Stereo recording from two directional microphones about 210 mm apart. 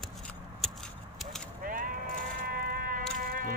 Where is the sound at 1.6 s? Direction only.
40° right (ahead or behind).